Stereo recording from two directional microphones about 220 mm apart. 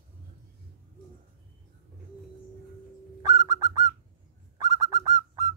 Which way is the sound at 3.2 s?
15° right (ahead or behind).